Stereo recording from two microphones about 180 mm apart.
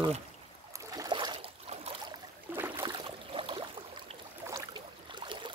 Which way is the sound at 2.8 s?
30° right (ahead or behind).